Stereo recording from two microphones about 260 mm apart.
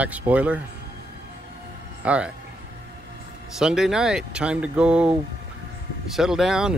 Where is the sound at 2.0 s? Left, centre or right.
Centre.